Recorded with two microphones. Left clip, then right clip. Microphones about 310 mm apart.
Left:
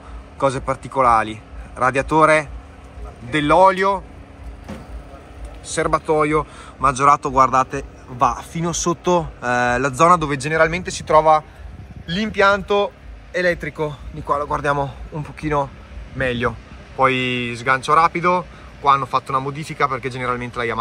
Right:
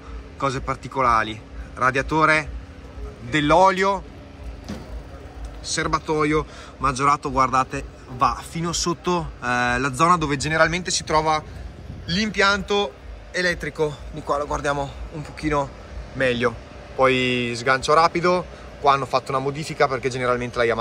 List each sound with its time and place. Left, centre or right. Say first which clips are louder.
0.4 s a man's voice: left 5 dB; centre
5.7 s a man's voice: left 4 dB; centre